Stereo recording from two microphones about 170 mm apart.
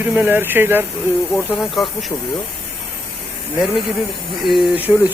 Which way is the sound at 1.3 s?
Centre (ahead or behind).